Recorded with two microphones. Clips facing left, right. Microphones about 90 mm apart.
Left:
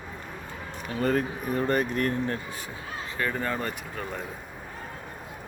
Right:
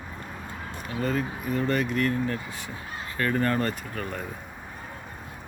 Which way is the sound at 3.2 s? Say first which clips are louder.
Right 4 dB; 10° left (ahead or behind).